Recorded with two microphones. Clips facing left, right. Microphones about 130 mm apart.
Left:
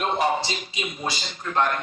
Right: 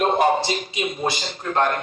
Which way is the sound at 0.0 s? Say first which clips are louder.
Right 5 dB; 45° right (ahead or behind).